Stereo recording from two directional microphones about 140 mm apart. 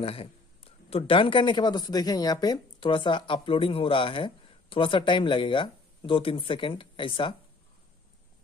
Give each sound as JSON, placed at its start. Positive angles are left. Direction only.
{"t": 0.0, "sound": "a man's voice", "side_deg": 45}